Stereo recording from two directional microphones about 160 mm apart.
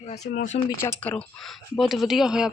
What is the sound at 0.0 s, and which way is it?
Speech, 45° left (ahead or behind).